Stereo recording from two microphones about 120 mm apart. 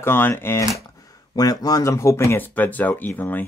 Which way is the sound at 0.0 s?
20° left (ahead or behind).